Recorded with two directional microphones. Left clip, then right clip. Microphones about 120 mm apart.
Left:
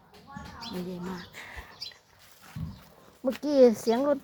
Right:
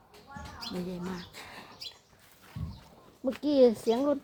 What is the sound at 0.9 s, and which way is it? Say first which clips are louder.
Speech: left 1 dB; 25° right (ahead or behind).